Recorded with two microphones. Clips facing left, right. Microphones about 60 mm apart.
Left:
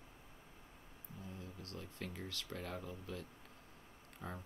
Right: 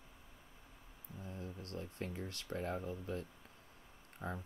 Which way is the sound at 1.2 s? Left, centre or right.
Right.